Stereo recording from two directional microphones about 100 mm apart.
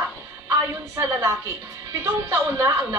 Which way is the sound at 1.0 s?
30° right (ahead or behind).